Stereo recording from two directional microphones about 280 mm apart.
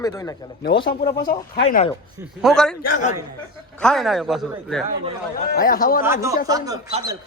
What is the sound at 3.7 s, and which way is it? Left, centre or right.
A man's voice, centre.